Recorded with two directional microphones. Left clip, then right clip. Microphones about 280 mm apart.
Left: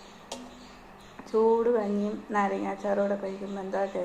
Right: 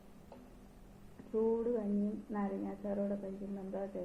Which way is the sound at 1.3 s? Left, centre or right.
Left.